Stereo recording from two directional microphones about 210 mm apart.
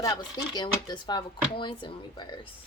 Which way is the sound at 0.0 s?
20° left (ahead or behind).